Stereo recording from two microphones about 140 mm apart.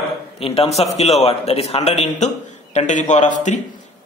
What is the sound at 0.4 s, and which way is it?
A man's voice, 45° left (ahead or behind).